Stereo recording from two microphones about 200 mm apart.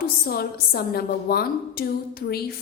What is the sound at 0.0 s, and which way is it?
A woman's voice, 50° left (ahead or behind).